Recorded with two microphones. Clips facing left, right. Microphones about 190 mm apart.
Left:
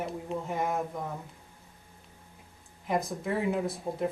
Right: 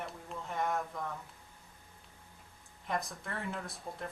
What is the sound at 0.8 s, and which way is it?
Speech, 20° left (ahead or behind).